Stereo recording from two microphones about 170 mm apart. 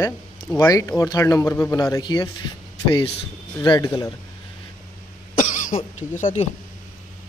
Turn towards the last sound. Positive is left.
turn(degrees=45)  # may be behind; listen again after turning